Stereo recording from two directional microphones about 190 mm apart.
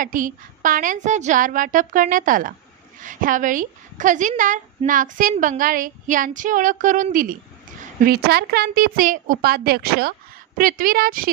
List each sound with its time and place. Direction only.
0.0 s a woman's voice: 45° right (ahead or behind)